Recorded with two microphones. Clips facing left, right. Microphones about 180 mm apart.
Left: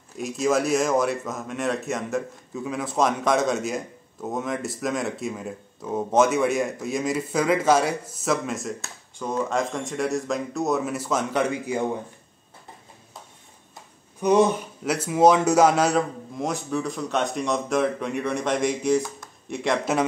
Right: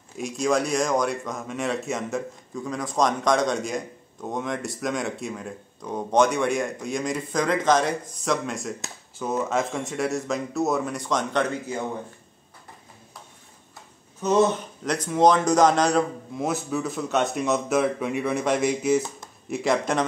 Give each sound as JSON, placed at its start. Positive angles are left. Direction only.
{"t": 0.2, "sound": "speech", "side_deg": 0}
{"t": 14.2, "sound": "speech", "side_deg": 15}